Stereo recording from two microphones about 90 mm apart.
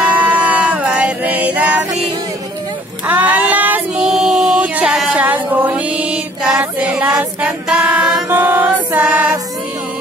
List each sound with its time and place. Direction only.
0.0 s music: 15° right (ahead or behind)
3.1 s a sound: 20° right (ahead or behind)
6.6 s music: 15° right (ahead or behind)